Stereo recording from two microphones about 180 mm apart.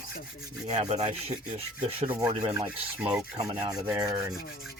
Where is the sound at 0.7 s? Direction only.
40° right (ahead or behind).